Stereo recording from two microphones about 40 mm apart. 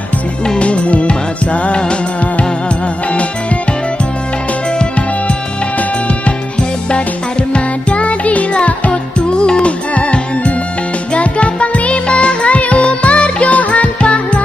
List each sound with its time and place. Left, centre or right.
0.6 s music: left
3.1 s music: left
5.8 s music: left